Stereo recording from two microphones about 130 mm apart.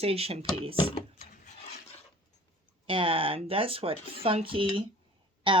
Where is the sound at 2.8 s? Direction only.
45° right (ahead or behind).